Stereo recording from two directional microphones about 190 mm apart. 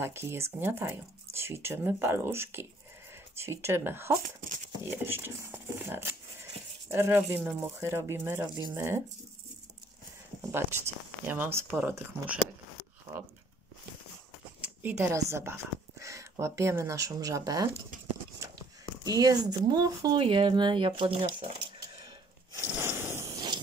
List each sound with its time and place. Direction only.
0.0 s speech: 10° right (ahead or behind)
10.5 s speech: 10° right (ahead or behind)
14.6 s speech: 10° right (ahead or behind)
19.0 s speech: 20° right (ahead or behind)
22.7 s a sound: 10° right (ahead or behind)